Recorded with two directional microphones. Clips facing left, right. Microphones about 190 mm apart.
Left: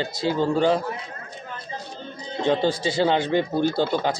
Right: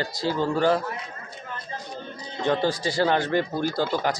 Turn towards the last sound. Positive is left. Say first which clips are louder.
# left 2 dB
turn(degrees=25)  # may be behind; listen again after turning